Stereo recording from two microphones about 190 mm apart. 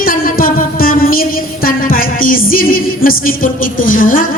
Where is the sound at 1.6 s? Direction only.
50° left (ahead or behind).